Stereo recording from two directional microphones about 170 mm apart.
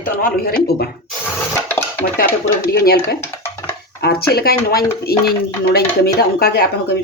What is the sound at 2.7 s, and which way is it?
Speech, 65° left (ahead or behind).